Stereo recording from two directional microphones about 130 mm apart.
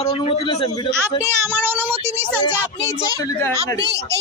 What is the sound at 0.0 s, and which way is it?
Speech, 45° left (ahead or behind).